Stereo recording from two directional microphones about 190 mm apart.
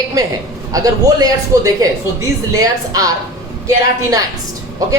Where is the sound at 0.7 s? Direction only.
20° right (ahead or behind).